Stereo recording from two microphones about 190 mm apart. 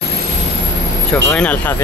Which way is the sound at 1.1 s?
10° left (ahead or behind).